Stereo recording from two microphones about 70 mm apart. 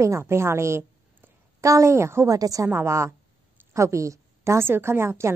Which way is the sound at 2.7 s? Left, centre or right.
Right.